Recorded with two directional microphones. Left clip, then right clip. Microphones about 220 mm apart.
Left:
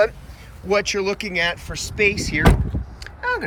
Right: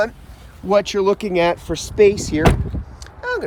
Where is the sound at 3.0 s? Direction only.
10° right (ahead or behind).